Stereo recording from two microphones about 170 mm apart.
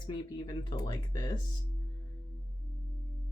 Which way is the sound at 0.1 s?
25° left (ahead or behind).